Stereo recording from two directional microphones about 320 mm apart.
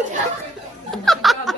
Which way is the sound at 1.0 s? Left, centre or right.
Centre.